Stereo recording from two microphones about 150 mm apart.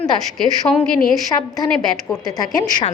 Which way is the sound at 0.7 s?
10° left (ahead or behind).